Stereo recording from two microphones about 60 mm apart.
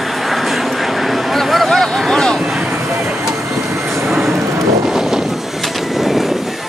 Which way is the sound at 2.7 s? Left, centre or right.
Right.